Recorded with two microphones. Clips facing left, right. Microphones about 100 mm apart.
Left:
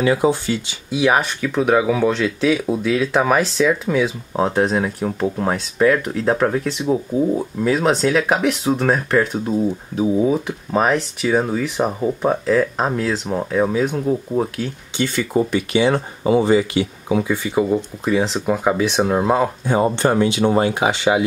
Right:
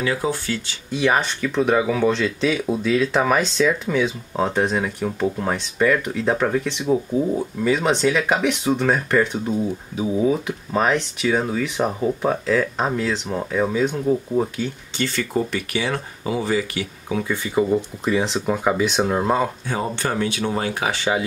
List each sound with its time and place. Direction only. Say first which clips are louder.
0.0 s speech: left 6 dB; 20° left (ahead or behind)
17.2 s speech: even; 10° left (ahead or behind)
19.6 s speech: left 7 dB; 20° left (ahead or behind)